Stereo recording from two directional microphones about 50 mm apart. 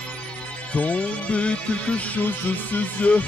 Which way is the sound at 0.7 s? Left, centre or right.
Left.